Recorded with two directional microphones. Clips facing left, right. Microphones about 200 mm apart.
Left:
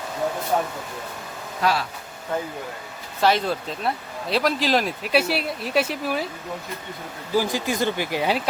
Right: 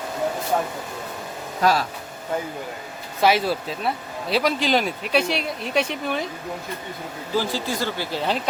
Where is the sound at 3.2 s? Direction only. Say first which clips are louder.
Right 1 dB; 5° right (ahead or behind).